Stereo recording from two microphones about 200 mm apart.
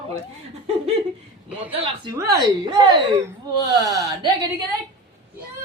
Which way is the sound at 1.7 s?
30° right (ahead or behind).